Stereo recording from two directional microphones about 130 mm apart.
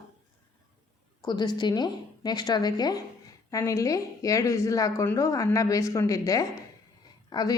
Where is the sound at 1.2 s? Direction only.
35° left (ahead or behind).